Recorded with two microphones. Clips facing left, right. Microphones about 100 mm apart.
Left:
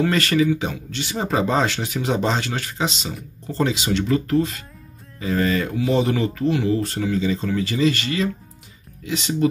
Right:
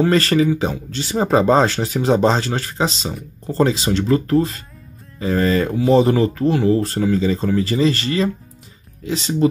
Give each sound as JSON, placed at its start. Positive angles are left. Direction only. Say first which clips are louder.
{"t": 0.0, "sound": "speech", "louder": "right 4 dB", "side_deg": -35}